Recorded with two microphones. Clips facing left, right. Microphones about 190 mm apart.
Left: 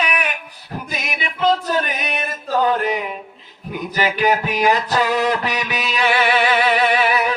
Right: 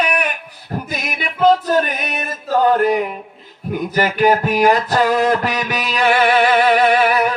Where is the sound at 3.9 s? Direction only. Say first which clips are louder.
Right 3 dB; 45° right (ahead or behind).